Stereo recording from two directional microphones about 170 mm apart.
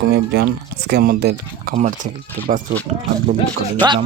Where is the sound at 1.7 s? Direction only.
45° right (ahead or behind).